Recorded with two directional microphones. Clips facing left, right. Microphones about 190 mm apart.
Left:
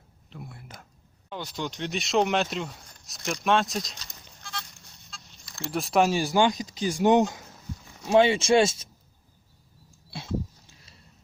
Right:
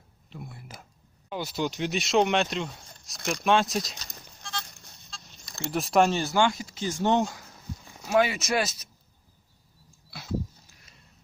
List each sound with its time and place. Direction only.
0.3 s speech: centre (ahead or behind)
5.1 s a sound: 40° right (ahead or behind)
5.7 s speech: centre (ahead or behind); by 8.9 s 25° left (ahead or behind)